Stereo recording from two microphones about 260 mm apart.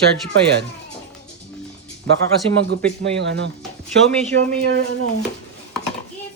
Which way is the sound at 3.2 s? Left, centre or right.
Right.